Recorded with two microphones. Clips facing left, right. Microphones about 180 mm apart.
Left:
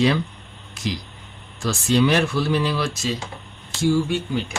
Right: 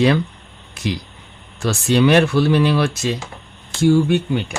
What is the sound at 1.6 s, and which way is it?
Speech, 65° right (ahead or behind).